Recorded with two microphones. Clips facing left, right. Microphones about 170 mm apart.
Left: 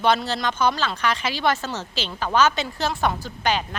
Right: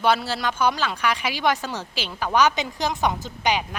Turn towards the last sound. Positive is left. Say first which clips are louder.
# even
turn(degrees=-15)  # may be behind; listen again after turning